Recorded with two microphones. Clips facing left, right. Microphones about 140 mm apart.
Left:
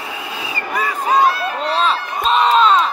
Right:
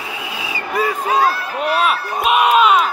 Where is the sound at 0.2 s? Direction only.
5° right (ahead or behind).